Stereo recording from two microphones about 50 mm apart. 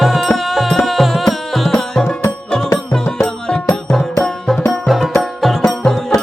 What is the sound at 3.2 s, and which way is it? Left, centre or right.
Music, centre.